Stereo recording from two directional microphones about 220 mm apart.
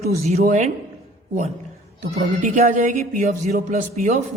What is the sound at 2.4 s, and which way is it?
A woman's voice, 35° right (ahead or behind).